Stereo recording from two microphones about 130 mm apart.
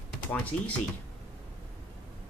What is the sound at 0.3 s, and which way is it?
Speech, 10° left (ahead or behind).